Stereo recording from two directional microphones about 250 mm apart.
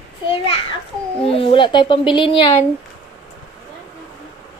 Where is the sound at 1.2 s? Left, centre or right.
Left.